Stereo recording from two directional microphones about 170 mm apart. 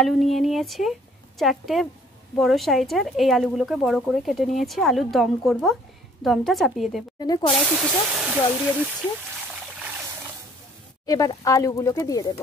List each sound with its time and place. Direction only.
0.0 s speech: centre (ahead or behind)
7.2 s speech: 25° left (ahead or behind)
7.6 s speech: 5° right (ahead or behind)
11.1 s speech: 20° left (ahead or behind)